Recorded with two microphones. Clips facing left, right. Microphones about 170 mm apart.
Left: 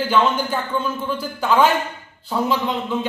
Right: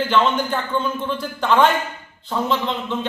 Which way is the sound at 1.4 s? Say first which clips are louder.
Even; 10° left (ahead or behind).